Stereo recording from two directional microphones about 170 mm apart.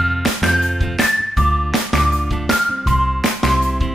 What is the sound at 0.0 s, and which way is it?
Music, centre (ahead or behind).